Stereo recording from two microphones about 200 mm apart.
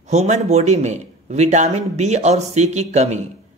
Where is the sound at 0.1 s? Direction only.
35° right (ahead or behind).